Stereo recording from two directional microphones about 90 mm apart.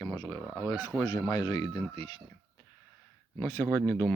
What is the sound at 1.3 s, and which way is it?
Speech, 45° left (ahead or behind).